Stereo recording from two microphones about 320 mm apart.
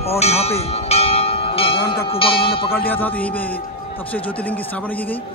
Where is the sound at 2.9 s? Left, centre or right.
Centre.